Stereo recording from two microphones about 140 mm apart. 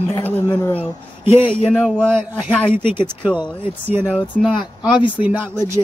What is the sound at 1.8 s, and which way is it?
Speech, 10° right (ahead or behind).